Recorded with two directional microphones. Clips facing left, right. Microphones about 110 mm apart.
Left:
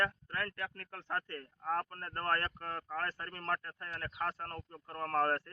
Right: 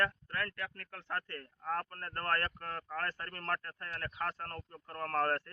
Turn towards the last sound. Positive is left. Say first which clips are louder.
# left 1 dB
turn(degrees=10)  # may be behind; listen again after turning